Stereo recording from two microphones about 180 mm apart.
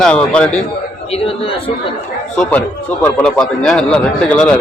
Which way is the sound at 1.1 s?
30° left (ahead or behind).